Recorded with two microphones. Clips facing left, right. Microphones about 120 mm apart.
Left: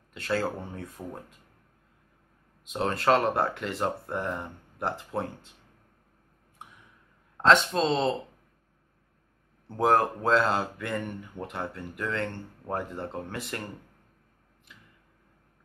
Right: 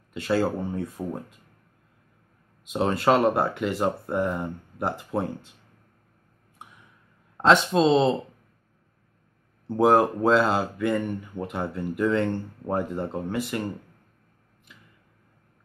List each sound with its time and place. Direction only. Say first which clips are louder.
0.1 s speech: right 5 dB; 5° right (ahead or behind)
2.6 s speech: right 4 dB; 5° right (ahead or behind)
7.4 s speech: right 3 dB; 5° right (ahead or behind)
9.7 s speech: right 4 dB; 5° right (ahead or behind)
14.7 s a sound: right 1 dB; 5° right (ahead or behind)